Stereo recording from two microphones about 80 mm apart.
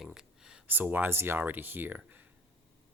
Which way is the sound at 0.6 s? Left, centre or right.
Right.